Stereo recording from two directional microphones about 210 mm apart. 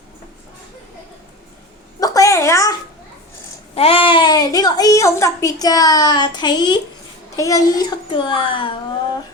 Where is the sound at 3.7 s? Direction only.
25° left (ahead or behind).